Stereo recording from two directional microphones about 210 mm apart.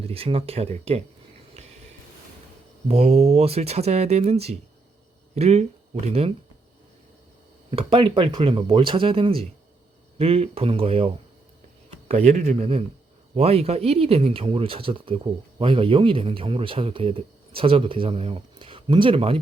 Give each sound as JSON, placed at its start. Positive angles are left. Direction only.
{"t": 0.0, "sound": "speech", "side_deg": -25}
{"t": 2.8, "sound": "speech", "side_deg": -30}
{"t": 7.7, "sound": "speech", "side_deg": -25}